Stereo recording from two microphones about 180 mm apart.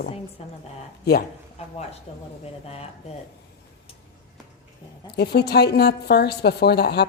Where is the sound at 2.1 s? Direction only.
35° left (ahead or behind).